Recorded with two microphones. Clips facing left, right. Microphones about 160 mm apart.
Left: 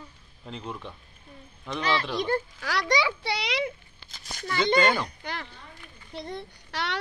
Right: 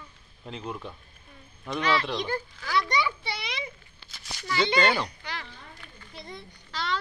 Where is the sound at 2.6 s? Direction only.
85° left.